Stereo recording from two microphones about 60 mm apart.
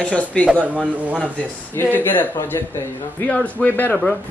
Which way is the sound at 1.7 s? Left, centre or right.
Left.